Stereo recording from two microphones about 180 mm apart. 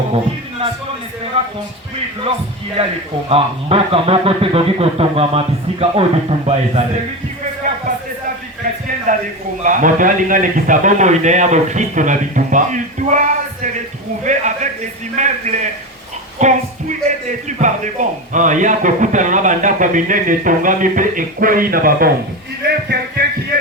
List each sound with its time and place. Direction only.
1.4 s a man's voice: 35° right (ahead or behind)
2.8 s a man's voice: 30° right (ahead or behind)
9.1 s a man's voice: 45° right (ahead or behind)
22.6 s speech: 65° right (ahead or behind)